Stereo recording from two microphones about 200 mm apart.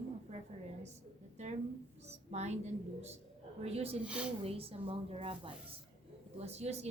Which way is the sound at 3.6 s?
30° right (ahead or behind).